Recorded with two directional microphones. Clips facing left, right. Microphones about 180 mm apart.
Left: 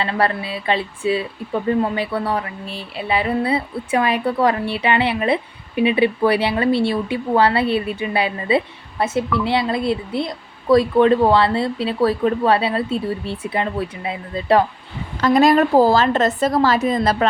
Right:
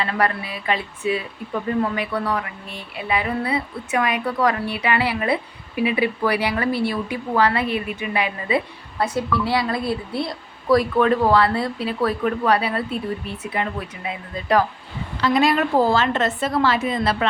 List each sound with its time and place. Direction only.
0.0 s a woman's voice: 30° left (ahead or behind)
15.2 s a woman's voice: 45° left (ahead or behind)